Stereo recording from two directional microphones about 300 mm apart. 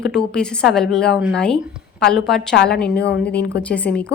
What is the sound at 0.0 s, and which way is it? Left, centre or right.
A woman's voice, centre.